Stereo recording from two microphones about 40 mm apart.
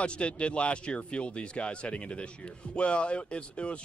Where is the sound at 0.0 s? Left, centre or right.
Left.